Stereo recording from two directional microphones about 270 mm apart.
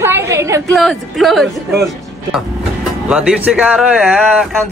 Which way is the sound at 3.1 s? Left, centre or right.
Centre.